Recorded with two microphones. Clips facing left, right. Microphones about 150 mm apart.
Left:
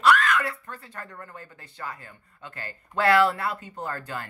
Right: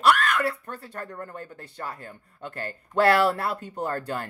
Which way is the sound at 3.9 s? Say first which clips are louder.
Right 3 dB; 35° right (ahead or behind).